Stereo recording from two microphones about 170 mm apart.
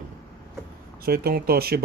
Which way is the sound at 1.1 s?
65° right (ahead or behind).